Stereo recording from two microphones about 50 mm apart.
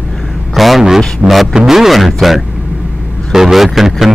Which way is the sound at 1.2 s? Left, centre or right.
Right.